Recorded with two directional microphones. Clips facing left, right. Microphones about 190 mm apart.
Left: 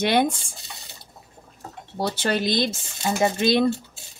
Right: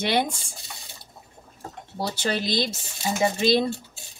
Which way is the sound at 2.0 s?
55° left (ahead or behind).